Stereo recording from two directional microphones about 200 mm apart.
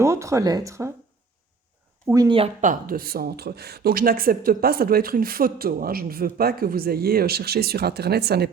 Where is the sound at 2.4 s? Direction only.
35° right (ahead or behind).